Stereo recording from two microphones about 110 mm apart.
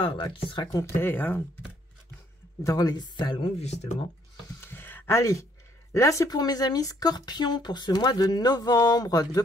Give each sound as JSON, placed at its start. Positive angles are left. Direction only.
{"t": 0.0, "sound": "speech", "side_deg": 50}
{"t": 0.7, "sound": "speech", "side_deg": 25}
{"t": 2.6, "sound": "speech", "side_deg": 35}
{"t": 3.5, "sound": "speech", "side_deg": 85}
{"t": 4.6, "sound": "a sound", "side_deg": 20}
{"t": 5.9, "sound": "speech", "side_deg": 30}